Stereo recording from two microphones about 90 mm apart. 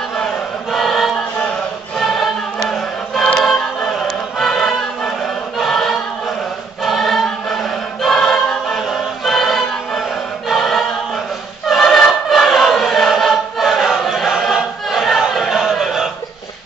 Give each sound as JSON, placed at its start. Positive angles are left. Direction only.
{"t": 0.2, "sound": "choir", "side_deg": 0}
{"t": 3.4, "sound": "choir", "side_deg": 5}